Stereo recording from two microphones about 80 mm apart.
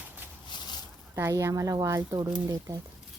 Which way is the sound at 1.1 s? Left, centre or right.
Right.